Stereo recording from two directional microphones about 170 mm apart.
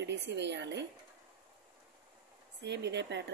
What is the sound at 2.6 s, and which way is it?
Speech, 85° right.